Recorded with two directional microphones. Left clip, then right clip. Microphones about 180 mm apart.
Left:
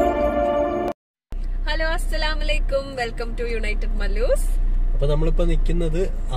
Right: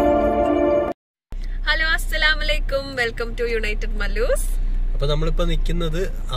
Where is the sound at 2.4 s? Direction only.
10° right (ahead or behind).